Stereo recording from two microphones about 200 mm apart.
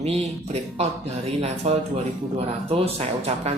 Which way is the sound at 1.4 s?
35° right (ahead or behind).